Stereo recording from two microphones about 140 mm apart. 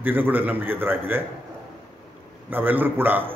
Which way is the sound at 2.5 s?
15° right (ahead or behind).